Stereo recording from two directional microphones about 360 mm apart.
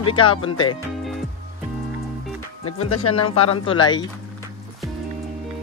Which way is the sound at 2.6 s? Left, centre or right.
Left.